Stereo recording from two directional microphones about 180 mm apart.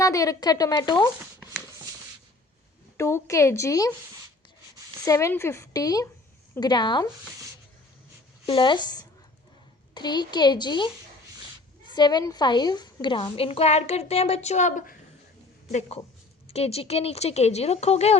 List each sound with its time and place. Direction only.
0.0 s speech: 15° left (ahead or behind)
3.0 s a woman's voice: 15° left (ahead or behind)
5.0 s speech: 15° left (ahead or behind)
8.4 s speech: 25° left (ahead or behind)
11.9 s a woman's voice: 25° left (ahead or behind); by 14.9 s 45° left (ahead or behind)
16.5 s a woman's voice: 35° left (ahead or behind)